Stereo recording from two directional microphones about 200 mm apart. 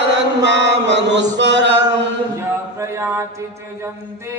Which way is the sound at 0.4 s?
65° right (ahead or behind).